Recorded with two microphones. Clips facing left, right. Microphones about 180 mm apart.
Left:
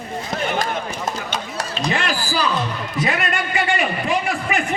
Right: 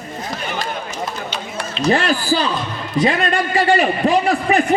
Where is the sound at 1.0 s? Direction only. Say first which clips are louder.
Left 1 dB; 45° left (ahead or behind).